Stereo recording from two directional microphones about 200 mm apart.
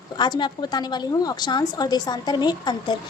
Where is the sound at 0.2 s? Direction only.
20° left (ahead or behind).